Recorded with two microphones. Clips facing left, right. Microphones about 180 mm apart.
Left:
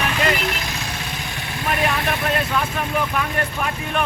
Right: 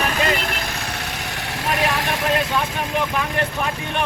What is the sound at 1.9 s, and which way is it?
Speech, 90° right.